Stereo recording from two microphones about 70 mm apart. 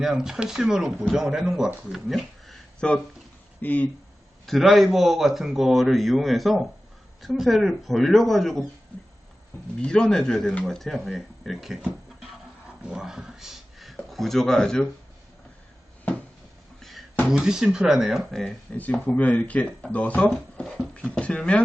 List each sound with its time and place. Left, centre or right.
0.0 s speech: centre
2.8 s speech: centre
4.4 s a man's voice: centre
9.8 s a man's voice: centre
17.3 s a man's voice: centre
18.3 s speech: centre